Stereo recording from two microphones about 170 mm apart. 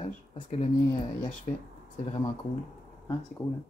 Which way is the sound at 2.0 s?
35° left (ahead or behind).